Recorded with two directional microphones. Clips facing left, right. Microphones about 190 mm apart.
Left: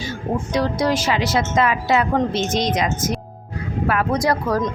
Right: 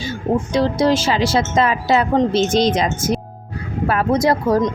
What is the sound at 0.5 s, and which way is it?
Speech, 25° right (ahead or behind).